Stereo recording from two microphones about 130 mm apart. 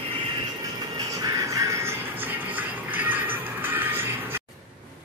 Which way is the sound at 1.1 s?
25° right (ahead or behind).